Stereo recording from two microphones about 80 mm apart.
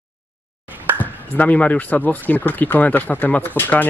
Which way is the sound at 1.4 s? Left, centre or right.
Centre.